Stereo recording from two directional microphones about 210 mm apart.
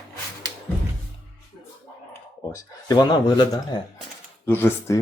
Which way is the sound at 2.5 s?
15° left (ahead or behind).